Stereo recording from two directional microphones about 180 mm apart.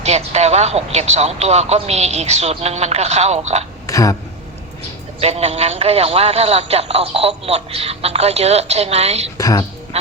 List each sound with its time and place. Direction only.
0.0 s a man's voice: 35° right (ahead or behind)
3.8 s speech: 20° left (ahead or behind)
5.2 s a man's voice: 35° right (ahead or behind)
9.4 s a woman's voice: 20° left (ahead or behind)
9.9 s music: 35° right (ahead or behind)